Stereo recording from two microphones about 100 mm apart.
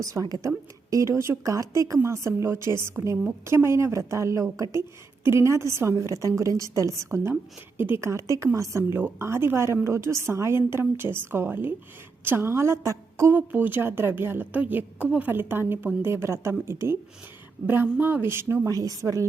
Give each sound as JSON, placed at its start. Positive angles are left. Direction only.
{"t": 0.0, "sound": "a woman's voice", "side_deg": -35}